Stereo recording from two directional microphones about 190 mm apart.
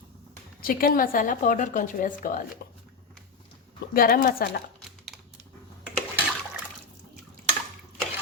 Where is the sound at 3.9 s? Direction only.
50° left (ahead or behind).